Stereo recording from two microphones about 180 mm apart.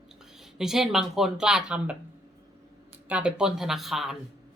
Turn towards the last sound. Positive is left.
turn(degrees=0)  # may be behind; listen again after turning